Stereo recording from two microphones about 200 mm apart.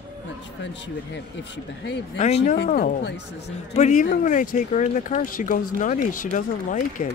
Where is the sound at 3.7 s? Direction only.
35° left (ahead or behind).